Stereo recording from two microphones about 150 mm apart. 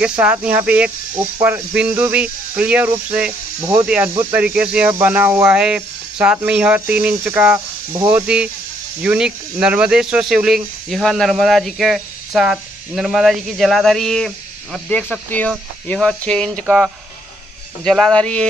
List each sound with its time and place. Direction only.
0.0 s snake: 5° right (ahead or behind)
9.0 s speech: 5° right (ahead or behind)
16.6 s speech: 5° right (ahead or behind)